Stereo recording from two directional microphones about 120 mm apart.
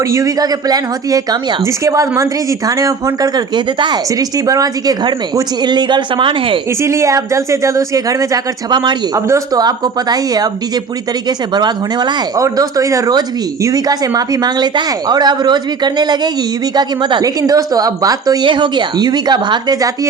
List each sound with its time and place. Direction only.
0.1 s speech: 30° right (ahead or behind); by 6.6 s 45° right (ahead or behind)
6.8 s speech: 25° right (ahead or behind)